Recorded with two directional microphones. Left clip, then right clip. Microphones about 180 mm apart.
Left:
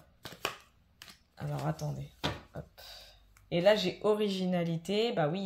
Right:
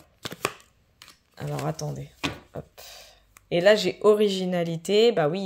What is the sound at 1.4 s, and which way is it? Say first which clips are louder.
Speech: right 7 dB; 50° right (ahead or behind).